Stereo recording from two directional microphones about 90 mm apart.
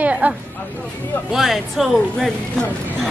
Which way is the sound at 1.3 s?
Centre (ahead or behind).